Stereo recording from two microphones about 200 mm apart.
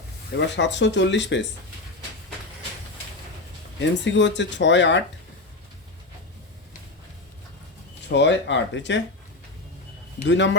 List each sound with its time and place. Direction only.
0.3 s speech: 60° left (ahead or behind)
3.8 s speech: 65° left (ahead or behind)
8.1 s speech: 60° left (ahead or behind)
10.2 s speech: 65° left (ahead or behind)